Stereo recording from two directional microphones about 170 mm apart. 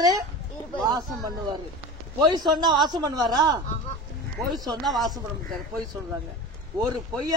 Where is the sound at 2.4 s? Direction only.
25° right (ahead or behind).